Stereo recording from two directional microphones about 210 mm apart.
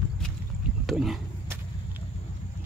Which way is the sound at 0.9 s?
Centre (ahead or behind).